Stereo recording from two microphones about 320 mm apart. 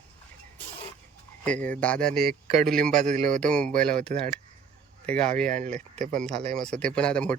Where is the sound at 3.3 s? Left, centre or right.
Centre.